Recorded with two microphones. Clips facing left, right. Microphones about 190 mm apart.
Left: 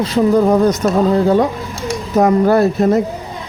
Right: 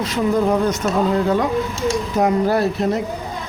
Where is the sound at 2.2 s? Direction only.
50° left (ahead or behind).